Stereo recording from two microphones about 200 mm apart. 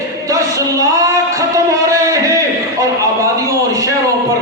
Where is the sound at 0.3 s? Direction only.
15° right (ahead or behind).